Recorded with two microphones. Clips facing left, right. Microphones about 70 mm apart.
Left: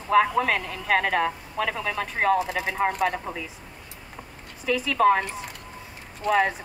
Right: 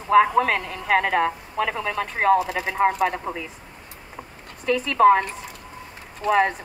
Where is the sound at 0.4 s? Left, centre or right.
Centre.